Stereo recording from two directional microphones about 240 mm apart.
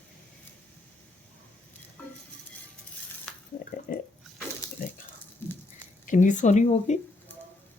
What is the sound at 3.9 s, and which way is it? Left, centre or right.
Water, left.